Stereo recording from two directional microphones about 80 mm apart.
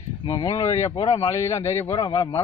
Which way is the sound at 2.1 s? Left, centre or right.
Left.